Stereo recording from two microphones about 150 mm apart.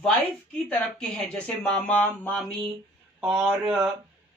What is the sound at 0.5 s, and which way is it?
Speech, 5° left (ahead or behind).